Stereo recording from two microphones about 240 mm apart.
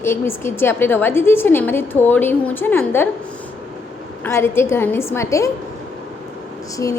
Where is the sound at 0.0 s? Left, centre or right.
Centre.